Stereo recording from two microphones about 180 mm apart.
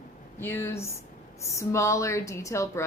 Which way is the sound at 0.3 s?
15° left (ahead or behind).